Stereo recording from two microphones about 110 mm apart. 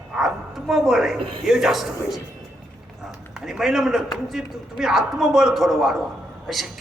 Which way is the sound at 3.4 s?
Centre (ahead or behind).